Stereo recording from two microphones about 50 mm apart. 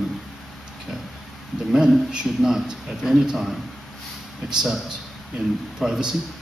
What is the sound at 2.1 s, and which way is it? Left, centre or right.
A man's voice, centre.